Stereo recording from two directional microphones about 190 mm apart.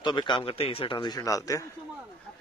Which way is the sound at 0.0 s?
25° left (ahead or behind).